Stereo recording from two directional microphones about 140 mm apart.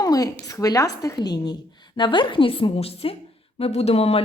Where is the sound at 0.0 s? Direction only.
25° left (ahead or behind).